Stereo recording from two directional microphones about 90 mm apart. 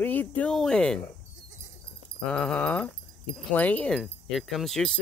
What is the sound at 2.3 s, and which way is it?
Speech, 10° left (ahead or behind).